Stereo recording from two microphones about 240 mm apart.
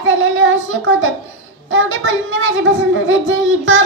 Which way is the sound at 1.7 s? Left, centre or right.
Right.